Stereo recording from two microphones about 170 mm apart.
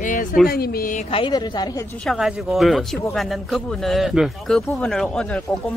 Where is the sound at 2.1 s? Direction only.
Centre (ahead or behind).